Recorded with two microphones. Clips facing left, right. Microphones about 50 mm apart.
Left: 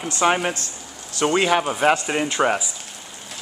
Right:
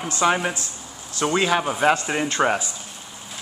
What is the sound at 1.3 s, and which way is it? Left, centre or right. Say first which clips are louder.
Speech: left 2 dB; centre.